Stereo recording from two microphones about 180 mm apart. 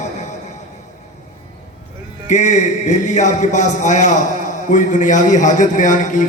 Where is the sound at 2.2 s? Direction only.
40° left (ahead or behind).